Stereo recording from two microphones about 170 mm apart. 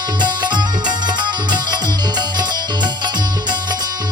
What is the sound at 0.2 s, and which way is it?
Music, 25° right (ahead or behind).